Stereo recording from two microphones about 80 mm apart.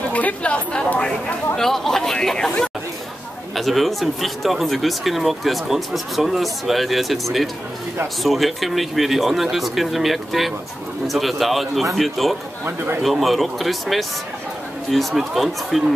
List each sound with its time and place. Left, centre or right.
0.1 s speech: centre
3.5 s speech: centre
12.6 s a man's voice: right
13.0 s speech: centre